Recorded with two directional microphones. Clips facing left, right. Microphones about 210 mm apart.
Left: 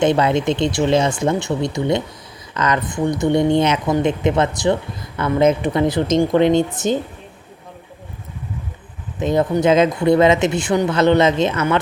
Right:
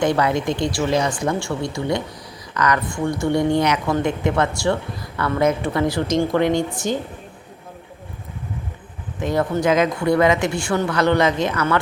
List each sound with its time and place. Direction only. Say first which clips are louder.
0.0 s speech: left 3 dB; 25° left (ahead or behind)
9.2 s speech: left 3 dB; 20° left (ahead or behind)